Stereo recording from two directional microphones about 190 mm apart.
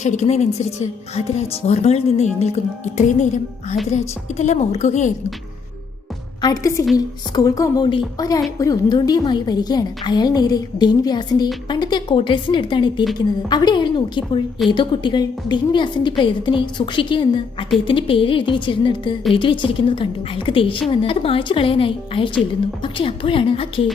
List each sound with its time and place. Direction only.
0.0 s a woman's voice: 35° left (ahead or behind)
6.4 s a woman's voice: 20° left (ahead or behind)